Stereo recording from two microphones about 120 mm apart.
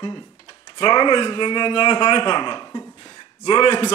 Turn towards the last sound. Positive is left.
turn(degrees=40)  # may be behind; listen again after turning